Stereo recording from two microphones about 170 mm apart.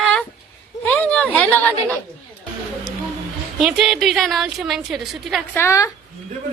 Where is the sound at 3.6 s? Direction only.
Centre (ahead or behind).